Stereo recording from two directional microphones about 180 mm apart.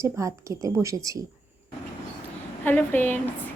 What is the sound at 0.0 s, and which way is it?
A woman's voice, 15° right (ahead or behind).